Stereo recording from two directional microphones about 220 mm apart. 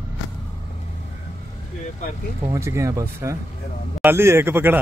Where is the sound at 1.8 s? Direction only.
35° left (ahead or behind).